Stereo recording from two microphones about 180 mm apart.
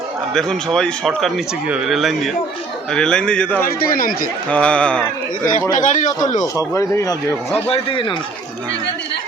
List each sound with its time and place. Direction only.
0.3 s speech: centre (ahead or behind)
3.7 s a man's voice: 50° left (ahead or behind)
4.4 s a man's voice: 5° left (ahead or behind)
5.7 s a man's voice: 45° left (ahead or behind)
6.4 s speech: 20° left (ahead or behind)
7.5 s a man's voice: 30° left (ahead or behind)